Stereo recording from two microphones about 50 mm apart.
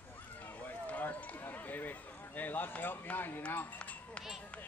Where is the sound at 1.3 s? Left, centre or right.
Left.